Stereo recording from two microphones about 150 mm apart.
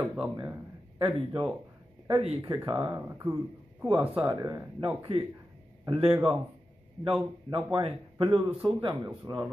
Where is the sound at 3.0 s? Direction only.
15° right (ahead or behind); by 5.2 s 35° right (ahead or behind).